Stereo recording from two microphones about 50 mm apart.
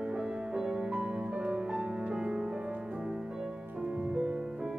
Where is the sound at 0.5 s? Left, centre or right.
Centre.